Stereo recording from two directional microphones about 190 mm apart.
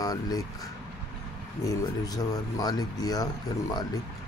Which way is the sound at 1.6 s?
20° left (ahead or behind).